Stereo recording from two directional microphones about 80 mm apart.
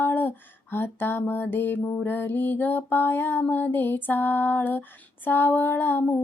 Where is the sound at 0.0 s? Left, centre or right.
Left.